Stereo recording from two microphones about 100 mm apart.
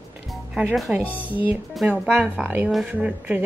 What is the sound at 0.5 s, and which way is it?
Speech, centre (ahead or behind).